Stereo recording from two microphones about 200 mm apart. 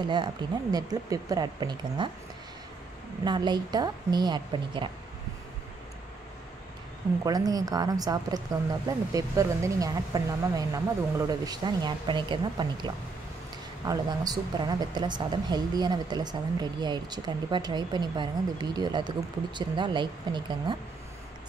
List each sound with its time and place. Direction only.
0.0 s a woman's voice: 20° right (ahead or behind)
3.3 s a woman's voice: 20° right (ahead or behind)
7.2 s a woman's voice: 20° right (ahead or behind)